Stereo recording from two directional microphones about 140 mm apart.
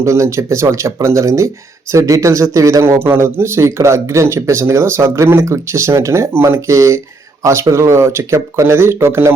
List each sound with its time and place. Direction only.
0.0 s a man's voice: 20° right (ahead or behind)